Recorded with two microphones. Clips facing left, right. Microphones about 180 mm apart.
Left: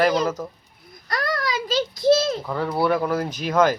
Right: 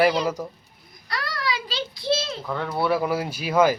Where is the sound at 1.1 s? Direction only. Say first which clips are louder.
Left 4 dB; 45° left (ahead or behind).